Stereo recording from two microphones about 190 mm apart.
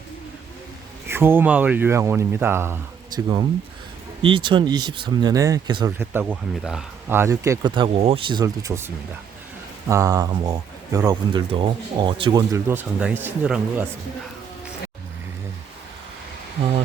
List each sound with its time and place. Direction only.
1.0 s speech: 10° right (ahead or behind)
4.2 s speech: 25° right (ahead or behind)
6.0 s speech: 10° right (ahead or behind)
9.9 s speech: 15° right (ahead or behind)